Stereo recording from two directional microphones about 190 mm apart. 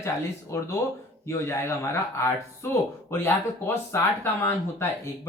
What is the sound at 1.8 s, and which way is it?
Speech, 15° left (ahead or behind).